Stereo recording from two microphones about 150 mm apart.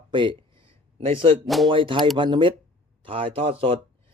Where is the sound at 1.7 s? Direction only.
35° right (ahead or behind).